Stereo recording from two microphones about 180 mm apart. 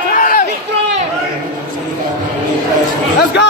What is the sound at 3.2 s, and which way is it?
Speech, 70° left (ahead or behind).